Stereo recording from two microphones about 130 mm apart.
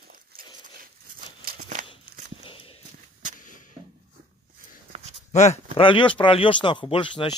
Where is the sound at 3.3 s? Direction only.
90° left.